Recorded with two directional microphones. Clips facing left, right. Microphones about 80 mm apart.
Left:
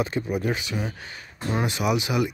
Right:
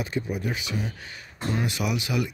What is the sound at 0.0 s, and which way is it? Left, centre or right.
Speech, left.